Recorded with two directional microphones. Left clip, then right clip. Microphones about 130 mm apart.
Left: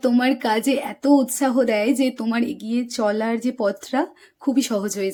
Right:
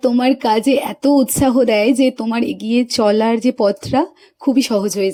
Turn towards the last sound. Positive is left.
turn(degrees=-30)  # may be behind; listen again after turning